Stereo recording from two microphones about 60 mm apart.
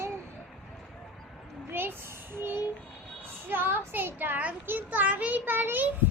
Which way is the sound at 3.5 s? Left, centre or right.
Right.